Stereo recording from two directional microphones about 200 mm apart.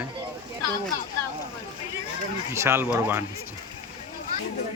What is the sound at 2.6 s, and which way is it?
Speech, 10° right (ahead or behind).